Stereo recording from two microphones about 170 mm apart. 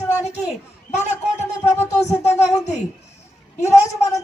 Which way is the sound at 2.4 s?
40° left (ahead or behind).